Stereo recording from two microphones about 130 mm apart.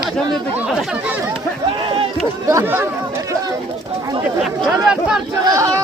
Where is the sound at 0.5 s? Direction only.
5° right (ahead or behind).